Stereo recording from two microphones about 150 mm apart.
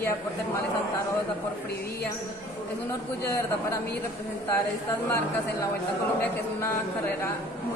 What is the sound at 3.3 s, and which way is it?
Speech, 15° left (ahead or behind).